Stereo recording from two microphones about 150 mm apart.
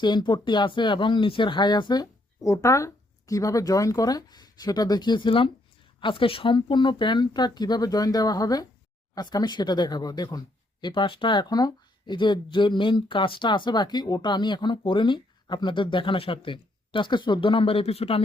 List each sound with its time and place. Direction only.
0.0 s speech: 30° left (ahead or behind)